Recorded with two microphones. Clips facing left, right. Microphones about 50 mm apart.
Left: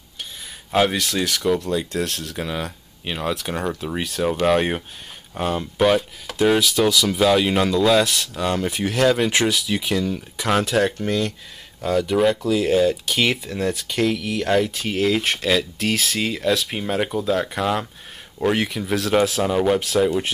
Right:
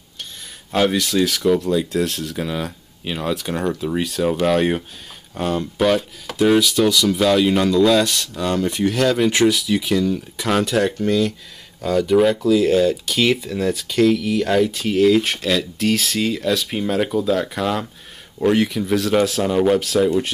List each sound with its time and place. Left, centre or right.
0.7 s speech: centre